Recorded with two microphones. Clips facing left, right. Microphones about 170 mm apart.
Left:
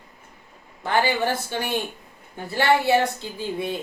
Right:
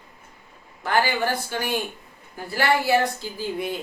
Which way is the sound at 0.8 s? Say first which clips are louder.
Left 1 dB; 25° left (ahead or behind).